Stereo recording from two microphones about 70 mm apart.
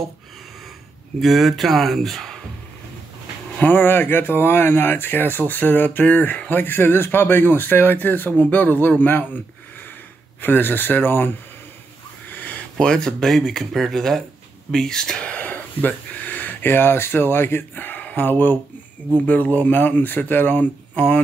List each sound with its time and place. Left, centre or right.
1.2 s speech: centre
3.5 s speech: left
10.4 s speech: left
12.3 s a sound: left
12.7 s speech: centre; by 21.0 s left